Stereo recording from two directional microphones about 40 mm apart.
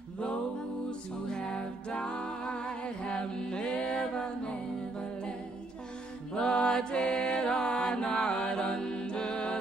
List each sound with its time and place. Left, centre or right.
0.8 s music: left
6.3 s mantra: left